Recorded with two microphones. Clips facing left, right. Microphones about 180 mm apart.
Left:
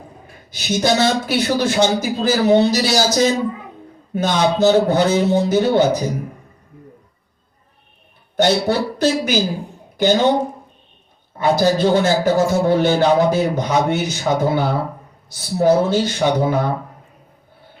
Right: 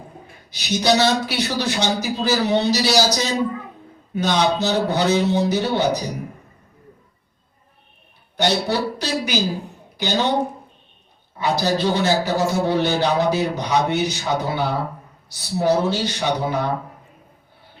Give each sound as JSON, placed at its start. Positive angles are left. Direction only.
{"t": 0.5, "sound": "a man's voice", "side_deg": 50}
{"t": 8.4, "sound": "a man's voice", "side_deg": 50}
{"t": 11.3, "sound": "a man's voice", "side_deg": 50}